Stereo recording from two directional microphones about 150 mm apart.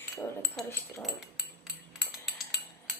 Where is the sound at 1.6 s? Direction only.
Centre (ahead or behind).